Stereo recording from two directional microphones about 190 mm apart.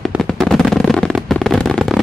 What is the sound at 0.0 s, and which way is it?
Fireworks, centre (ahead or behind).